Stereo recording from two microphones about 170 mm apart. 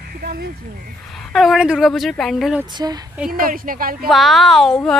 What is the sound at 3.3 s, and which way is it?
Speech, 55° right (ahead or behind).